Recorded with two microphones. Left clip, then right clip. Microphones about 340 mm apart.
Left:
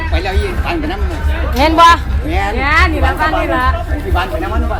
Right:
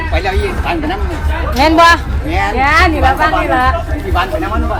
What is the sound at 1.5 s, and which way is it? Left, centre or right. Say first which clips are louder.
A man's voice: even; centre.